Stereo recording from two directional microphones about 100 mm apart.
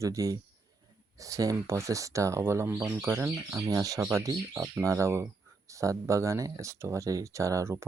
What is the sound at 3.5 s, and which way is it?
Speech, 35° right (ahead or behind).